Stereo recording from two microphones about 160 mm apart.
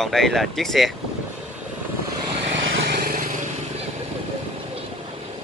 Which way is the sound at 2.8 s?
65° right (ahead or behind).